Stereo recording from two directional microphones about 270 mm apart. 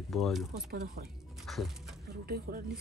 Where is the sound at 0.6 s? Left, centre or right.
Right.